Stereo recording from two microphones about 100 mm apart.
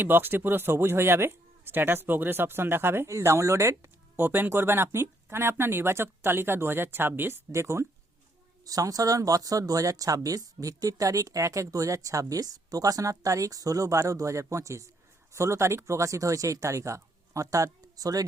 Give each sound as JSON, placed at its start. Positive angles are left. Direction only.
{"t": 0.0, "sound": "speech", "side_deg": -20}